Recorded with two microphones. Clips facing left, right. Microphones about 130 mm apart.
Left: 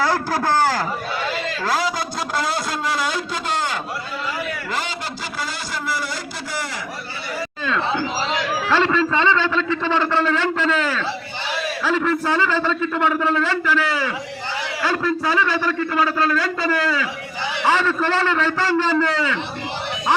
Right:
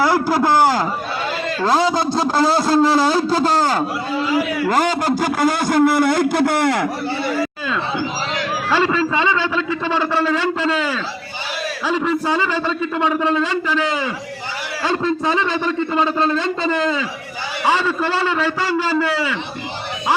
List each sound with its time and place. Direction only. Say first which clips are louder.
0.0 s a man's voice: right 4 dB; 15° right (ahead or behind); by 6.8 s 60° right (ahead or behind)
7.7 s a man's voice: even; 10° right (ahead or behind)